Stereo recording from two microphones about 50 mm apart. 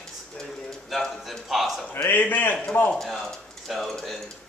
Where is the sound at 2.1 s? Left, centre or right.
Left.